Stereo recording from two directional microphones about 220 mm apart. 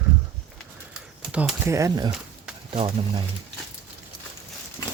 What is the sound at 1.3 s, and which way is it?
Speech, 10° right (ahead or behind).